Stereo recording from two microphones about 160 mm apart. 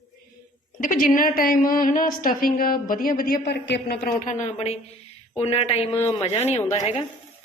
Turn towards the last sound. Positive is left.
turn(degrees=45)  # may be behind; listen again after turning